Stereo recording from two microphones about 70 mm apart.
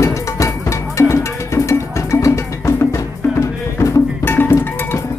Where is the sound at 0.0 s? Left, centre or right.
Left.